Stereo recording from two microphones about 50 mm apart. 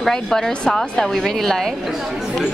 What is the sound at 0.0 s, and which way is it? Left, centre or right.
A woman's voice, centre.